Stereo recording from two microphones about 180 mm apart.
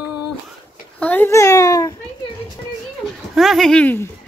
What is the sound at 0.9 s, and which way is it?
Babbling, 10° left (ahead or behind).